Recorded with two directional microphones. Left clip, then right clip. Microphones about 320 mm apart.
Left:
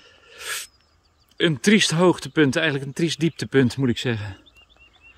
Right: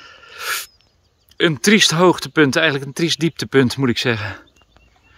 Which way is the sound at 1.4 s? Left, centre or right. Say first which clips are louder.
Right 5 dB; centre.